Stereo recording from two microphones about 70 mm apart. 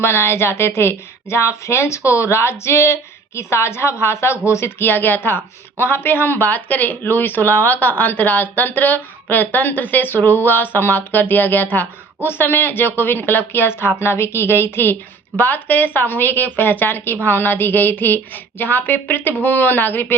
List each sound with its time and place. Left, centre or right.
0.0 s a woman's voice: left